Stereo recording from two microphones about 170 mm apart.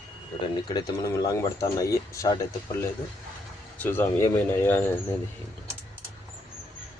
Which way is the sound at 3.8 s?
10° left (ahead or behind).